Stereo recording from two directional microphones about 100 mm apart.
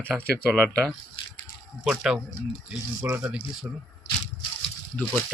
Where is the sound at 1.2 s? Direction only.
60° left (ahead or behind).